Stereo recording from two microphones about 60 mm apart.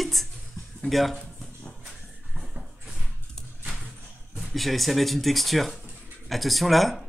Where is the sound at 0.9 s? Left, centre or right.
Centre.